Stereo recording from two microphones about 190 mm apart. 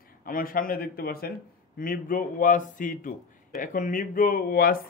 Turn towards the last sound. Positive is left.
turn(degrees=50)  # may be behind; listen again after turning